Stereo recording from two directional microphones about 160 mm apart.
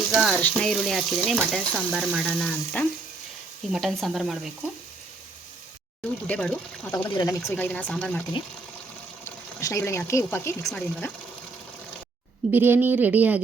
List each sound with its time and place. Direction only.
0.1 s frying: centre (ahead or behind)
6.2 s speech: 5° left (ahead or behind)
7.1 s speech: 25° left (ahead or behind)
7.5 s speech: 10° left (ahead or behind)
9.2 s speech: 20° left (ahead or behind)
10.7 s frying: 5° left (ahead or behind)
12.5 s a woman's voice: 15° right (ahead or behind)